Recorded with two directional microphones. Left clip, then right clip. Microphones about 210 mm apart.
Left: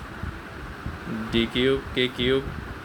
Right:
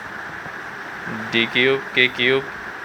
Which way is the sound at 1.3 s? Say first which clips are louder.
Right 6 dB; 25° left (ahead or behind).